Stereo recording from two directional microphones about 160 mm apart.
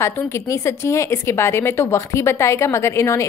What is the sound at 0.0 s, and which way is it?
Speech, 15° left (ahead or behind).